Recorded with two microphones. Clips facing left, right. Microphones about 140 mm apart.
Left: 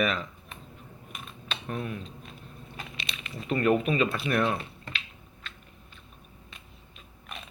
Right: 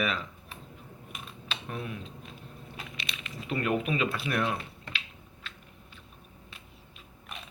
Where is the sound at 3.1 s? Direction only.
20° left (ahead or behind).